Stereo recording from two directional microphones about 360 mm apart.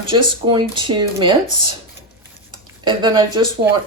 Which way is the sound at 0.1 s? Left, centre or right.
Centre.